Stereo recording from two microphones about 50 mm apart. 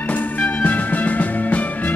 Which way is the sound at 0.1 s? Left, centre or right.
Left.